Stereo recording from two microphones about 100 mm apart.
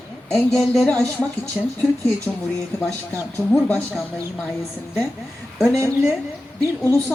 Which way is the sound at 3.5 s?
10° left (ahead or behind).